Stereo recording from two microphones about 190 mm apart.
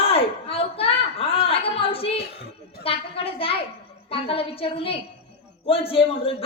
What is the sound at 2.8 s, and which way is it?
A woman's voice, 30° left (ahead or behind).